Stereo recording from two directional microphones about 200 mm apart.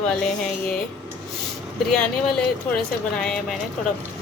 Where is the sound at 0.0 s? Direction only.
5° left (ahead or behind).